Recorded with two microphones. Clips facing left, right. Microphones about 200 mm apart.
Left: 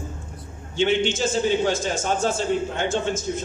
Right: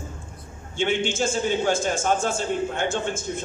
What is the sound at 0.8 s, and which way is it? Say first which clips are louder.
A man's voice: left 2 dB; 50° right (ahead or behind).